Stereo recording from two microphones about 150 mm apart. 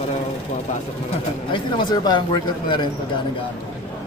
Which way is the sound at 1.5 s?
30° left (ahead or behind).